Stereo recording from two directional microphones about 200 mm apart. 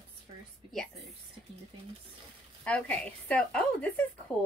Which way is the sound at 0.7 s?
Centre (ahead or behind).